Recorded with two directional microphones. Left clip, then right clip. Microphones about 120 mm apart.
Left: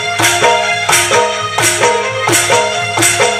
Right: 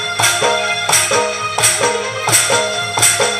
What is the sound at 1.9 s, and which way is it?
Music, 20° right (ahead or behind).